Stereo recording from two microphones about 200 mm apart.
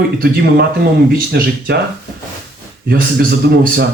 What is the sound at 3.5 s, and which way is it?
Speech, 55° right (ahead or behind).